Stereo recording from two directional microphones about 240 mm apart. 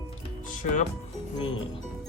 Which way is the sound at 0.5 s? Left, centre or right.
Left.